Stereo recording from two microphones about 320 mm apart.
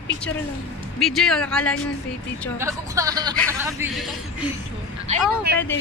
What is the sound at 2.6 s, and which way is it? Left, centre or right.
A man's voice, centre.